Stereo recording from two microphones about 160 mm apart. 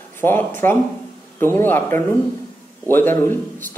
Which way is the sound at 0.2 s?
10° left (ahead or behind).